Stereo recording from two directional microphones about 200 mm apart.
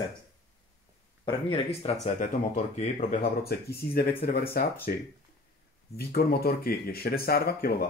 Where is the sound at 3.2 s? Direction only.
50° left (ahead or behind).